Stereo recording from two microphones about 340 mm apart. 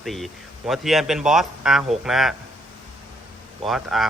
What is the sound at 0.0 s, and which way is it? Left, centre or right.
A man's voice, centre.